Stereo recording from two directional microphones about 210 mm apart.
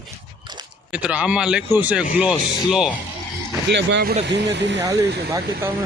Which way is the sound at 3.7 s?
55° right (ahead or behind).